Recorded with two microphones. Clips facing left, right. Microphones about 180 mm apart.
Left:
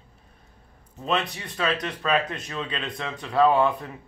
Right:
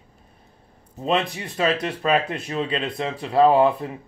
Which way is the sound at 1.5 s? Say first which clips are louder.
Right 4 dB; 25° right (ahead or behind).